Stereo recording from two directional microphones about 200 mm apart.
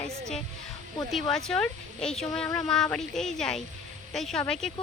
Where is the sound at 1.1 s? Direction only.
Centre (ahead or behind).